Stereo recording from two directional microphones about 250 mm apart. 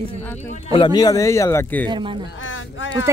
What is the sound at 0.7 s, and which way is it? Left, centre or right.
A man's voice, centre.